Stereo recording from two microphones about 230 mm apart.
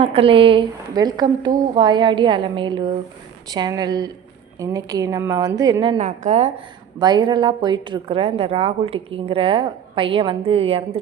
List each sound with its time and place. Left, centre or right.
0.0 s a woman's voice: right
6.0 s a woman's voice: right
7.0 s a woman's voice: centre